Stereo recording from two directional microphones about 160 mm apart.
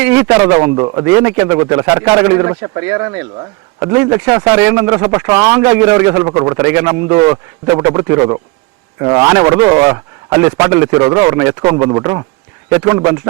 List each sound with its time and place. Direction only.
0.0 s speech: 10° right (ahead or behind)
0.8 s a man's voice: 30° right (ahead or behind)
1.0 s a man's voice: 15° right (ahead or behind)